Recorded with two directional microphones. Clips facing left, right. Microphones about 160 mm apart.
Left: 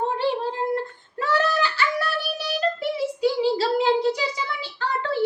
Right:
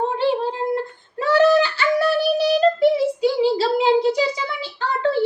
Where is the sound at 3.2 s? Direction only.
15° right (ahead or behind).